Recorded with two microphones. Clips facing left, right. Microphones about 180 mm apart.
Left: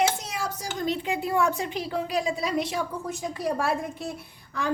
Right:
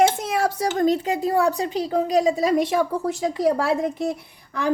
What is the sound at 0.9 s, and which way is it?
A woman's voice, 40° right (ahead or behind).